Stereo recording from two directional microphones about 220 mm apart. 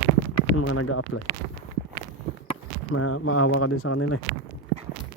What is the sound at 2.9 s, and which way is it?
Speech, 85° left.